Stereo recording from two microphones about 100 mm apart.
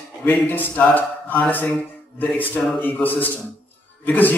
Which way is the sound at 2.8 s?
20° left (ahead or behind).